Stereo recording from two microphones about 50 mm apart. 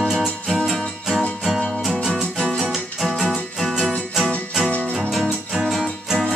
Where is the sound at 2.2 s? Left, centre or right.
Centre.